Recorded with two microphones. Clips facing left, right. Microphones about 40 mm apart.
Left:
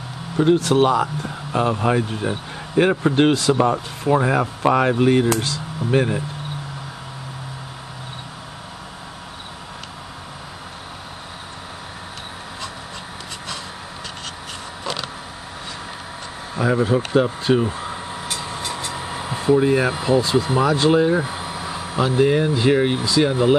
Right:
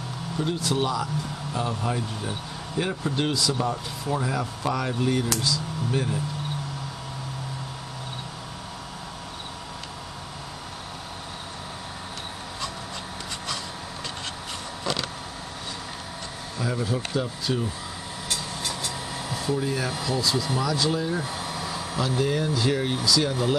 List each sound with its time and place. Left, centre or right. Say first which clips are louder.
0.6 s speech: left 9 dB; left
16.5 s speech: left 10 dB; left
18.3 s a sound: left 2 dB; left
21.2 s speech: left 5 dB; left